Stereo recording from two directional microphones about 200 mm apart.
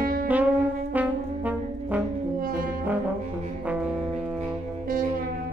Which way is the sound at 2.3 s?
45° right (ahead or behind).